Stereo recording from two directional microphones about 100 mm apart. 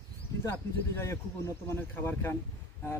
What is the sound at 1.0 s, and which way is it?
Speech, 30° left (ahead or behind).